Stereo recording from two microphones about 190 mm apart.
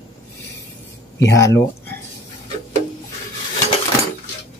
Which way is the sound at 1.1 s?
15° left (ahead or behind).